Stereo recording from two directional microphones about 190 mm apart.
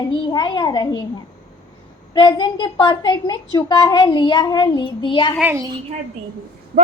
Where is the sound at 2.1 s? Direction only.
25° left (ahead or behind).